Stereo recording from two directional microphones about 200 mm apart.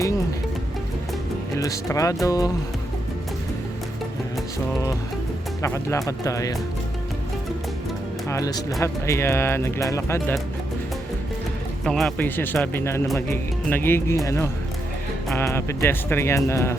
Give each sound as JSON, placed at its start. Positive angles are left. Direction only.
{"t": 1.5, "sound": "speech", "side_deg": 15}
{"t": 5.6, "sound": "speech", "side_deg": 15}
{"t": 8.3, "sound": "speech", "side_deg": 15}
{"t": 11.9, "sound": "speech", "side_deg": 0}